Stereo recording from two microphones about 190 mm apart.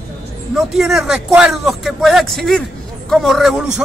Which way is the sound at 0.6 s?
Centre (ahead or behind).